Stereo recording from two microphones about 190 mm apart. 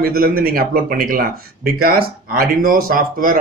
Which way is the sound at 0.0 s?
50° right (ahead or behind).